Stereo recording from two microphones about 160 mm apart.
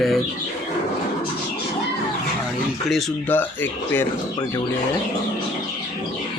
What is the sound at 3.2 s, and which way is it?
Speech, 10° left (ahead or behind).